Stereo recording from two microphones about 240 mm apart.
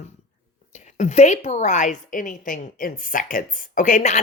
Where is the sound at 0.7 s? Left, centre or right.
Left.